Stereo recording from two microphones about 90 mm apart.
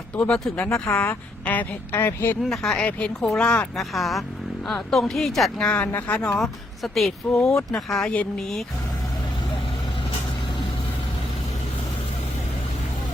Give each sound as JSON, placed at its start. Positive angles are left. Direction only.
{"t": 0.2, "sound": "speech", "side_deg": 10}
{"t": 0.9, "sound": "speech", "side_deg": 20}
{"t": 2.4, "sound": "speech", "side_deg": 5}
{"t": 3.8, "sound": "speech", "side_deg": 0}
{"t": 6.4, "sound": "speech", "side_deg": 0}
{"t": 7.4, "sound": "speech", "side_deg": 35}
{"t": 7.9, "sound": "speech", "side_deg": 5}